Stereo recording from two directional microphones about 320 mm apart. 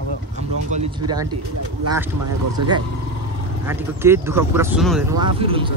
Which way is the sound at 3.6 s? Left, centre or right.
Centre.